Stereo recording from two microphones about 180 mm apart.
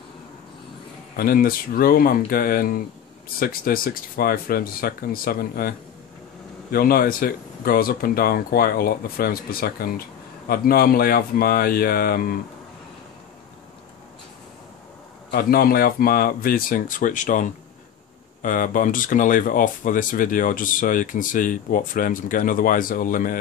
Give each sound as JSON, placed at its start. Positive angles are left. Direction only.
{"t": 1.1, "sound": "speech", "side_deg": 55}
{"t": 15.3, "sound": "speech", "side_deg": 55}